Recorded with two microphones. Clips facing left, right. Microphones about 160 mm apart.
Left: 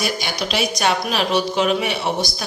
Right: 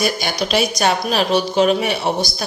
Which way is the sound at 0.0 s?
45° right (ahead or behind).